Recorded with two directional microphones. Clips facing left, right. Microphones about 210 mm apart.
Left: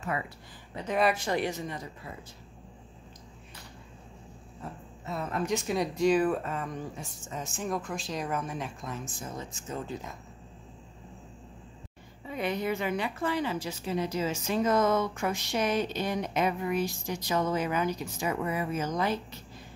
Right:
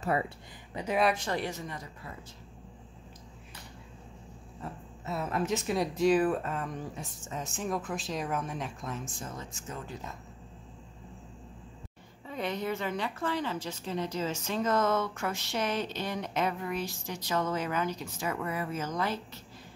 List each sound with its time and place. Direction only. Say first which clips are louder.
0.0 s speech: right 4 dB; 35° right (ahead or behind)
0.8 s a woman's voice: left 1 dB; centre (ahead or behind); by 1.9 s 20° left (ahead or behind)
5.1 s speech: even; 5° right (ahead or behind)
9.4 s speech: left 3 dB; 20° left (ahead or behind)
12.3 s a woman's voice: left 2 dB; 10° left (ahead or behind)